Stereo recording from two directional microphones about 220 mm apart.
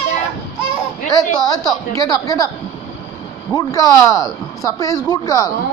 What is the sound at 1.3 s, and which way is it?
Speech, 15° left (ahead or behind).